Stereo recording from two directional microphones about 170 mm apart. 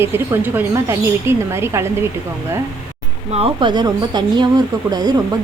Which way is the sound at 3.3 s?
30° right (ahead or behind).